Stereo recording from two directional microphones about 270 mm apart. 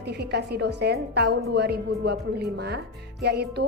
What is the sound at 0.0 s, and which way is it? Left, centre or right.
Speech, right.